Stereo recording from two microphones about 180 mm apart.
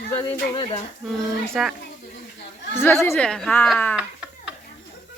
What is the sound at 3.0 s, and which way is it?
Speech, 10° left (ahead or behind).